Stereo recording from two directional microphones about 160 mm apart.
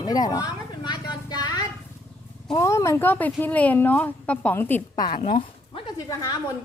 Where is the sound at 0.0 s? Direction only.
25° left (ahead or behind).